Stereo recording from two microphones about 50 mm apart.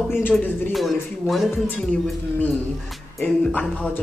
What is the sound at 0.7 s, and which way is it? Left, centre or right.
Speech, centre.